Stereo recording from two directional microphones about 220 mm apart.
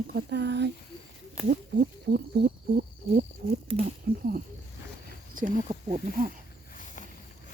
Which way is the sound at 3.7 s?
30° right (ahead or behind).